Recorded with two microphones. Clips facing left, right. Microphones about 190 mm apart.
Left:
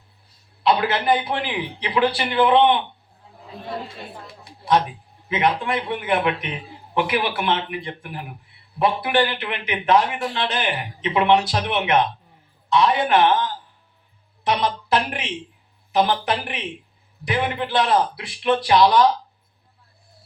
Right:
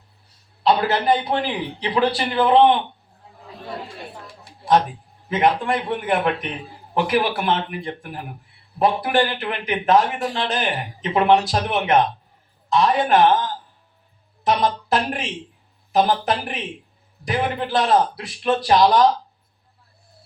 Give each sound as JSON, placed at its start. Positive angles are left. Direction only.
{"t": 0.6, "sound": "speech", "side_deg": -40}
{"t": 5.3, "sound": "a man's voice", "side_deg": -45}